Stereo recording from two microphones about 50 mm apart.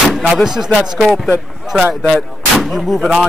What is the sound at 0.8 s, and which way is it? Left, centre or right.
Speech, centre.